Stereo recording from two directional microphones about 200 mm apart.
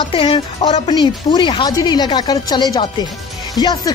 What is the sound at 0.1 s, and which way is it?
Speech, 25° left (ahead or behind).